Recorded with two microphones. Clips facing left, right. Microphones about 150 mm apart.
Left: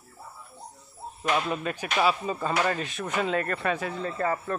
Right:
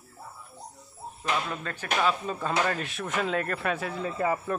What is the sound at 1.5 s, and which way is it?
Speech, 15° left (ahead or behind).